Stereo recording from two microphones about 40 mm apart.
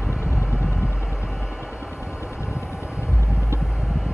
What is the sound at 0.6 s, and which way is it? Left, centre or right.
Vehicle, centre.